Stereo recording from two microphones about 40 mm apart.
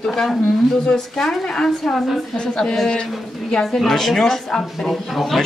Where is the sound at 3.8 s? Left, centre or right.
Centre.